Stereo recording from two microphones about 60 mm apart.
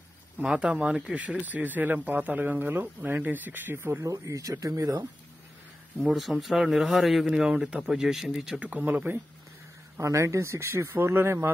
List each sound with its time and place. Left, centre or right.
0.5 s speech: centre; by 4.0 s right
4.0 s speech: right
5.9 s speech: centre
7.3 s speech: centre
8.5 s speech: right
9.9 s speech: right